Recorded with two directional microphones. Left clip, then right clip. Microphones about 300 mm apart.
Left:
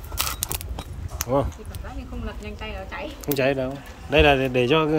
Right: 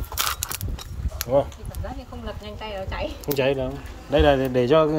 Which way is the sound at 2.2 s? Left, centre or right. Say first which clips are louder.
Right 2 dB; right.